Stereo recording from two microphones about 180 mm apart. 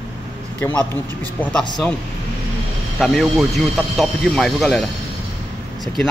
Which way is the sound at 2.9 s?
Centre (ahead or behind).